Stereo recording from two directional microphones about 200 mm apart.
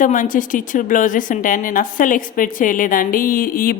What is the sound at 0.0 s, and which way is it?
Speech, 40° left (ahead or behind).